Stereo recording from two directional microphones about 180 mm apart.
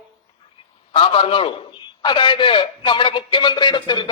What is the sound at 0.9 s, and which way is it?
A man's voice, 30° left (ahead or behind).